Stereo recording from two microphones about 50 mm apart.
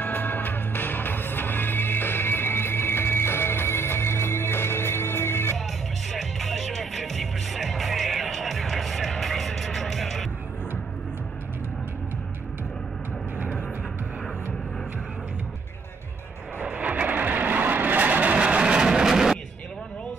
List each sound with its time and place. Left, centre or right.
0.0 s music: left
6.1 s music: centre
16.7 s vehicle: right; by 19.4 s centre